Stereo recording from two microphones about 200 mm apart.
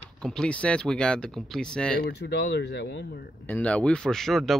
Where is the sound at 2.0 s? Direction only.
55° left (ahead or behind).